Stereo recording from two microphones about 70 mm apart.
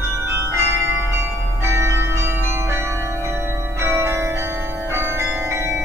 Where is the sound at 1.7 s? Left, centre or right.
Right.